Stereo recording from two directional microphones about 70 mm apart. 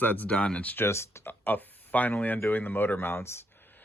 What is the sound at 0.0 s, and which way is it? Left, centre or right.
Speech, left.